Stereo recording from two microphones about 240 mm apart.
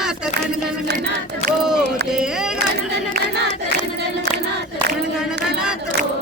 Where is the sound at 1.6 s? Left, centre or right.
Centre.